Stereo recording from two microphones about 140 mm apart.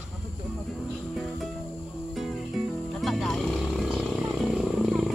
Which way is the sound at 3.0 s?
Centre (ahead or behind).